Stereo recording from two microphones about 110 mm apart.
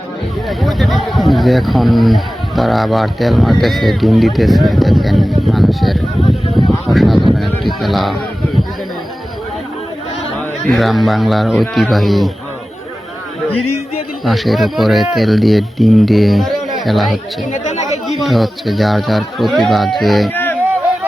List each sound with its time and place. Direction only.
0.6 s speech: centre (ahead or behind)
10.7 s speech: centre (ahead or behind)
14.3 s speech: centre (ahead or behind)
18.2 s speech: centre (ahead or behind)
20.3 s a sound: 20° left (ahead or behind)